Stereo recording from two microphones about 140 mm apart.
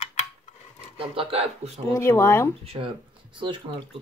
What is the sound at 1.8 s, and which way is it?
Speech, 20° left (ahead or behind).